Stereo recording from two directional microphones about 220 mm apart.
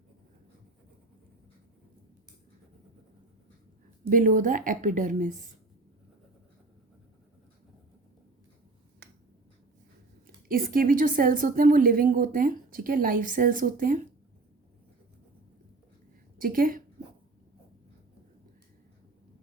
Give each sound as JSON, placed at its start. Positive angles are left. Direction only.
{"t": 4.1, "sound": "a woman's voice", "side_deg": -35}
{"t": 9.0, "sound": "finger snapping", "side_deg": -50}
{"t": 10.2, "sound": "a woman's voice", "side_deg": -40}
{"t": 16.4, "sound": "a woman's voice", "side_deg": -40}